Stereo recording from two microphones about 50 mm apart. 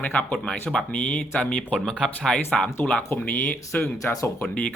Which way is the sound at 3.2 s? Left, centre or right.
Left.